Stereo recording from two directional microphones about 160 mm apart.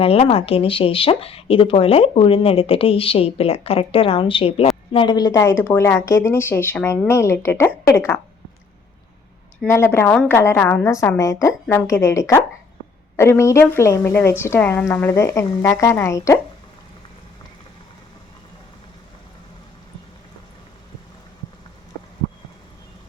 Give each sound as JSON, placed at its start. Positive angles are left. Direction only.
{"t": 0.0, "sound": "a woman's voice", "side_deg": 35}
{"t": 9.6, "sound": "a woman's voice", "side_deg": 15}